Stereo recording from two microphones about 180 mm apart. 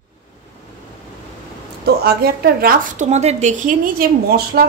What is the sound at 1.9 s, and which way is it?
A woman's voice, 60° right (ahead or behind).